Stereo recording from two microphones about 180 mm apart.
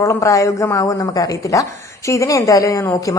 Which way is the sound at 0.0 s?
15° left (ahead or behind).